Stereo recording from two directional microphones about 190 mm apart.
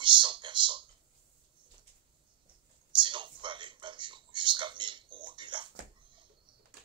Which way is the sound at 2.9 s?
25° right (ahead or behind).